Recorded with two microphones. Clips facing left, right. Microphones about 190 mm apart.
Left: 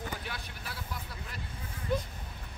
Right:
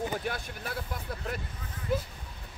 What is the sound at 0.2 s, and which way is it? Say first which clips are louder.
Vehicle: right 7 dB; 50° right (ahead or behind).